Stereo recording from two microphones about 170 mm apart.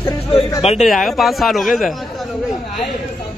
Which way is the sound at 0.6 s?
40° left (ahead or behind).